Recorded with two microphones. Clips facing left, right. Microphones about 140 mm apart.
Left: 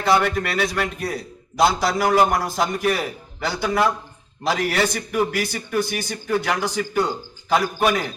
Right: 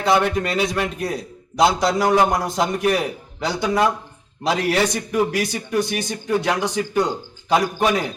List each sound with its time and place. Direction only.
0.2 s a man's voice: 20° right (ahead or behind)